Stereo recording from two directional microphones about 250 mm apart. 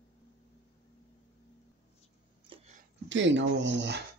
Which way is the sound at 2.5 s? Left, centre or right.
Right.